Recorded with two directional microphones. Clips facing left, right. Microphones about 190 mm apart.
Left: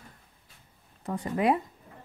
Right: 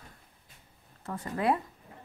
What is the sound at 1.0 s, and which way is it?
Speech, 15° left (ahead or behind).